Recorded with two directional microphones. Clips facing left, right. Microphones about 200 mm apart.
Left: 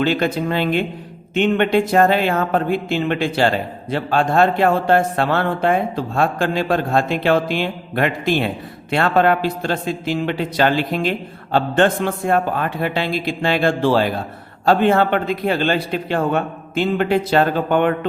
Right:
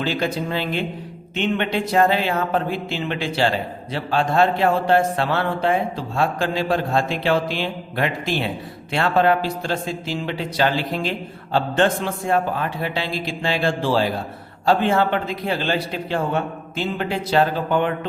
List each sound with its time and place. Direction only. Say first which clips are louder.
0.0 s a man's voice: left 5 dB; 60° left (ahead or behind)
1.4 s mantra: left 6 dB; 55° left (ahead or behind)
8.9 s a man's voice: left 2 dB; 55° left (ahead or behind)